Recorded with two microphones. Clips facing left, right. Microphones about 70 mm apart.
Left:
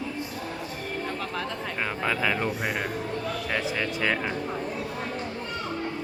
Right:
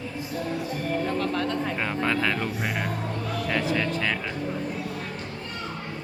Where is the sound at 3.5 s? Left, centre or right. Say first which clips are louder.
Right 4 dB; centre.